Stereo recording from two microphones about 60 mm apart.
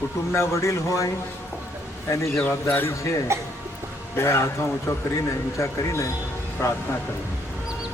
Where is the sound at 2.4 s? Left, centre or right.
Left.